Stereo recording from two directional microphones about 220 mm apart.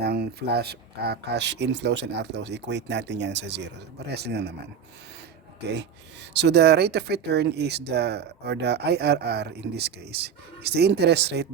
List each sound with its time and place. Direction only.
0.0 s speech: 45° right (ahead or behind)
6.3 s speech: 50° right (ahead or behind)